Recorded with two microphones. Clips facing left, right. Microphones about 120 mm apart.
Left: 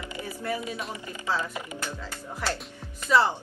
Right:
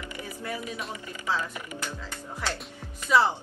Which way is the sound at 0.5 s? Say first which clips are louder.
Left 2 dB; 25° left (ahead or behind).